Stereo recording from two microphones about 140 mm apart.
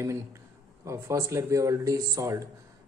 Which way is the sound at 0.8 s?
20° right (ahead or behind).